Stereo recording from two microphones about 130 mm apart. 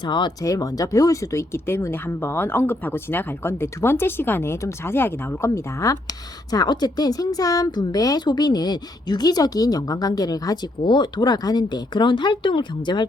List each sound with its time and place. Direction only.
0.0 s speech: 35° left (ahead or behind)